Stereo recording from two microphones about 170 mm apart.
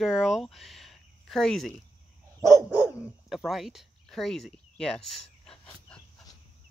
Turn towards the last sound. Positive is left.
turn(degrees=5)  # may be behind; listen again after turning